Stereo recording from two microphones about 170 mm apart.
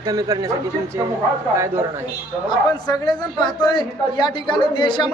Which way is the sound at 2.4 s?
25° left (ahead or behind).